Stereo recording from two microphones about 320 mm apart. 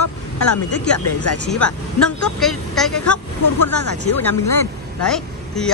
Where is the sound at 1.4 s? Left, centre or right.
Centre.